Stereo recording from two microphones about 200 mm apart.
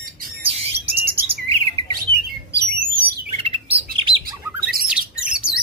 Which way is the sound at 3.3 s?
30° right (ahead or behind).